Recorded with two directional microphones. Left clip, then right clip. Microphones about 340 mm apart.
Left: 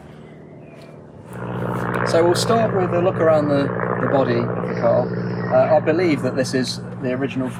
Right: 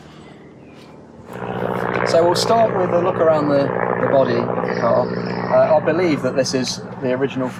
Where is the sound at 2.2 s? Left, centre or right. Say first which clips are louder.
Right 3 dB; right.